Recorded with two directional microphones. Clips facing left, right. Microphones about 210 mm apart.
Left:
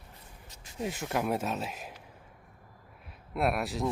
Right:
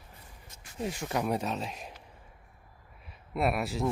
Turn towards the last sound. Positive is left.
turn(degrees=0)  # may be behind; listen again after turning